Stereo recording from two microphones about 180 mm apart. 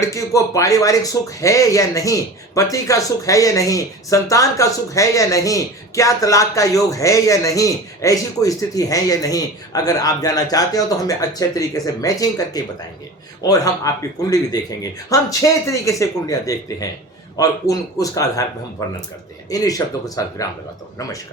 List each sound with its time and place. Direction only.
0.0 s speech: 15° left (ahead or behind)
19.5 s speech: 20° left (ahead or behind)